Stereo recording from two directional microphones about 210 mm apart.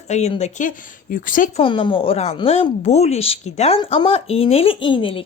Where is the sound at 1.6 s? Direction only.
25° left (ahead or behind).